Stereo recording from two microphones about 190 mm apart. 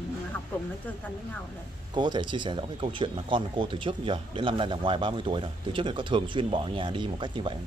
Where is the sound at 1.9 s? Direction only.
25° right (ahead or behind).